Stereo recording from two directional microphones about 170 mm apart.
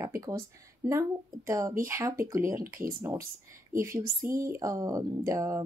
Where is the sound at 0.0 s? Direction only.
20° right (ahead or behind).